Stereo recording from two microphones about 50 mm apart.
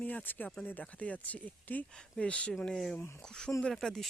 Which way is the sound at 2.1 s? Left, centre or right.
Left.